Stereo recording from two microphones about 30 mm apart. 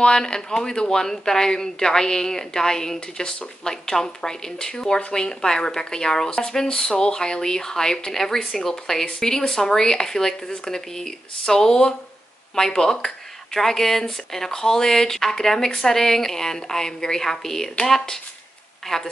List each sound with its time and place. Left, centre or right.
0.2 s a woman's voice: left
9.0 s a woman's voice: left